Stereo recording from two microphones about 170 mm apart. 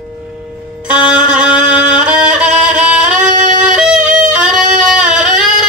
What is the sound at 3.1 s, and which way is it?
Music, 45° right (ahead or behind).